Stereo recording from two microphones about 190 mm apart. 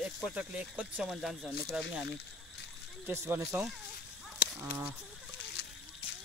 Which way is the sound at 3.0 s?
15° right (ahead or behind).